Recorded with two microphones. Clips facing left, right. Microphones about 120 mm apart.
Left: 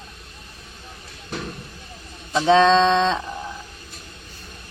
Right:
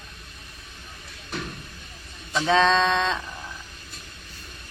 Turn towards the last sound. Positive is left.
turn(degrees=25)  # may be behind; listen again after turning